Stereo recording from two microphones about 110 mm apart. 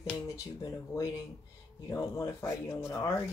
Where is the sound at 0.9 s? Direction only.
30° left (ahead or behind).